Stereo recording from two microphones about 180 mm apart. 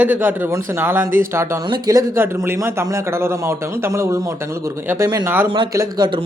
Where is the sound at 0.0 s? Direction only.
10° right (ahead or behind).